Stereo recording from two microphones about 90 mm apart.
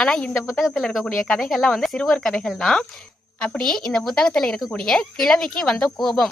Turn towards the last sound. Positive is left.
turn(degrees=5)  # may be behind; listen again after turning